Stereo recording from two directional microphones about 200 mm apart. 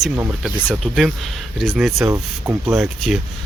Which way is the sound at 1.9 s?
15° right (ahead or behind).